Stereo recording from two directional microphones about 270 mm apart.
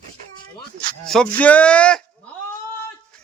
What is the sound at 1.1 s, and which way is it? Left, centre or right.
Speech, centre.